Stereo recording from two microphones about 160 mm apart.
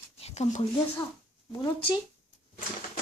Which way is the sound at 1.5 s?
25° left (ahead or behind).